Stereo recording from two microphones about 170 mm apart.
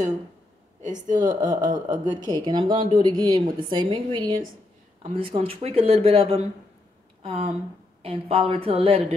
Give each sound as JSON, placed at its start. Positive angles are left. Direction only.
{"t": 0.8, "sound": "speech", "side_deg": -45}
{"t": 2.2, "sound": "a woman's voice", "side_deg": -25}